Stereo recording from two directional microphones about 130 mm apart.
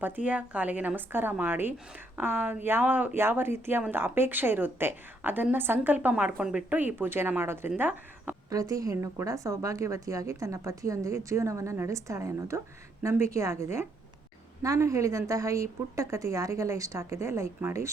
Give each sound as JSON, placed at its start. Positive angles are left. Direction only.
{"t": 0.0, "sound": "speech", "side_deg": -10}
{"t": 8.4, "sound": "speech", "side_deg": -30}